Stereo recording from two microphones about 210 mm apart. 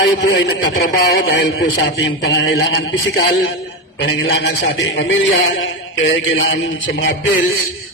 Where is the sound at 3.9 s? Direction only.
55° left (ahead or behind).